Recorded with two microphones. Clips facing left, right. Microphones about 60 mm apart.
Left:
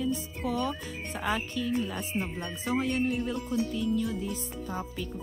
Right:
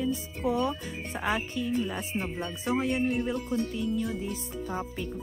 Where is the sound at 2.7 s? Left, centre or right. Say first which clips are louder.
Right 1 dB; centre.